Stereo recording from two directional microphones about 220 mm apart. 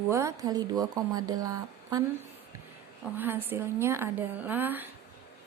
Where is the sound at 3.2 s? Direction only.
10° right (ahead or behind).